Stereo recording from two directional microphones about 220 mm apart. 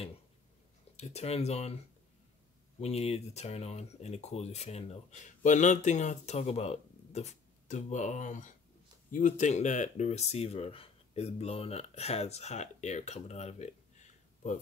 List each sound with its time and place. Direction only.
0.9 s speech: 30° left (ahead or behind)
2.8 s speech: 30° left (ahead or behind)